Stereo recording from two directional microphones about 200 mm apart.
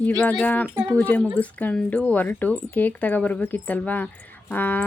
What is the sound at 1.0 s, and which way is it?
Speech, 5° left (ahead or behind).